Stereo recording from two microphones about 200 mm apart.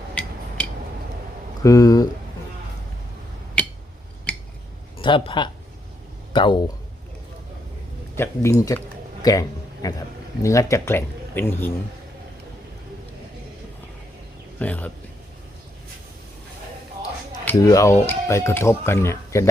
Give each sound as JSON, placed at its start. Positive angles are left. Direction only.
{"t": 0.1, "sound": "a sound", "side_deg": 5}
{"t": 1.6, "sound": "speech", "side_deg": 15}
{"t": 4.3, "sound": "a sound", "side_deg": 5}
{"t": 4.9, "sound": "speech", "side_deg": 25}
{"t": 8.1, "sound": "speech", "side_deg": 15}
{"t": 9.2, "sound": "a sound", "side_deg": 20}
{"t": 10.4, "sound": "speech", "side_deg": 15}
{"t": 14.6, "sound": "speech", "side_deg": 10}
{"t": 17.4, "sound": "speech", "side_deg": 15}